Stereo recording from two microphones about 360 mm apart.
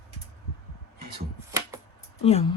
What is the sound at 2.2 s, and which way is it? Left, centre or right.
Speech, centre.